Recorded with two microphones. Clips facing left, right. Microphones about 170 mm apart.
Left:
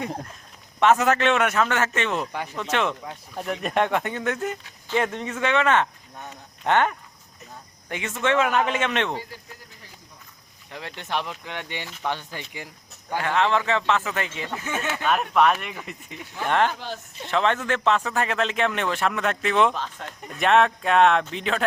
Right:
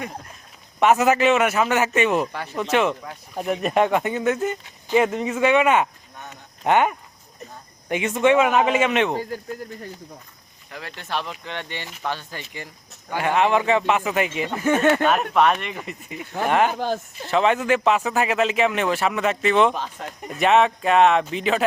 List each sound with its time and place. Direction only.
0.8 s a man's voice: 10° right (ahead or behind)
2.3 s speech: 15° left (ahead or behind)
2.6 s a man's voice: 10° right (ahead or behind)
10.7 s speech: 25° left (ahead or behind)
13.1 s a man's voice: 15° right (ahead or behind)
14.6 s speech: 55° right (ahead or behind)
15.0 s a man's voice: centre (ahead or behind)
16.7 s speech: 45° right (ahead or behind)
17.2 s speech: 5° right (ahead or behind)
19.7 s speech: 10° right (ahead or behind)